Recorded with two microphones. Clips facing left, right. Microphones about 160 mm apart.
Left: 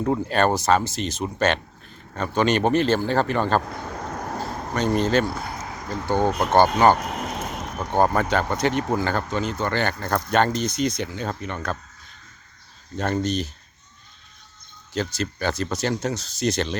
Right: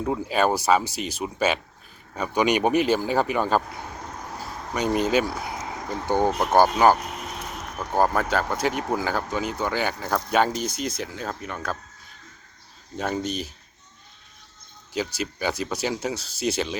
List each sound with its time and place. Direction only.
0.0 s speech: 5° right (ahead or behind)
3.8 s a sound: 60° left (ahead or behind)
4.7 s speech: 10° right (ahead or behind)
13.0 s speech: 5° right (ahead or behind)
14.9 s speech: 10° right (ahead or behind)